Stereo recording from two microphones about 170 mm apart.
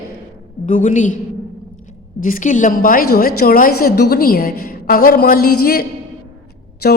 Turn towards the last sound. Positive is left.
turn(degrees=70)  # may be behind; listen again after turning